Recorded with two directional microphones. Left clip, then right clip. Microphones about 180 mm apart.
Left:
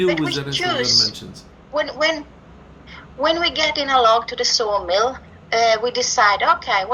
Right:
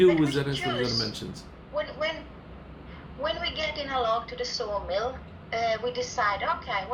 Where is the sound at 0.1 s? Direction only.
60° left (ahead or behind).